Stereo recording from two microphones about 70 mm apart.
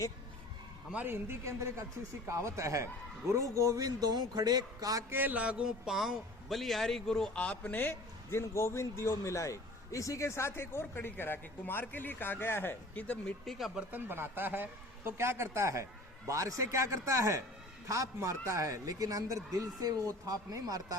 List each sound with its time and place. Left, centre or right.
1.0 s a man's voice: right
5.1 s a man's voice: right; by 7.3 s centre
7.3 s a man's voice: centre; by 12.7 s left
12.9 s speech: centre
13.4 s speech: centre
13.9 s a man's voice: right